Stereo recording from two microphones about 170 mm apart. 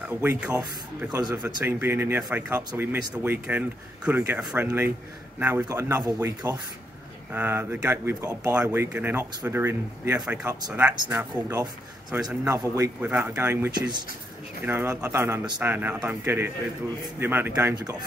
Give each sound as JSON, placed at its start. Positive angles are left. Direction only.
{"t": 0.0, "sound": "speech", "side_deg": -10}
{"t": 13.7, "sound": "speech", "side_deg": -25}
{"t": 14.6, "sound": "speech", "side_deg": -10}